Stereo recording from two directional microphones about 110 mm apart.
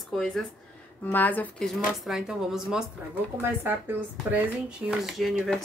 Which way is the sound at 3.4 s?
20° right (ahead or behind).